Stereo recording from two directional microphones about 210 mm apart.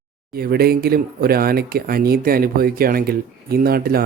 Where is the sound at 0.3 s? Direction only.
45° right (ahead or behind).